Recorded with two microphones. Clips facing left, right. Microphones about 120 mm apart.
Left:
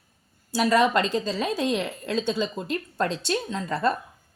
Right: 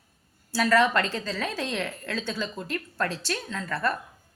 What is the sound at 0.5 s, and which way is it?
A woman's voice, 15° left (ahead or behind).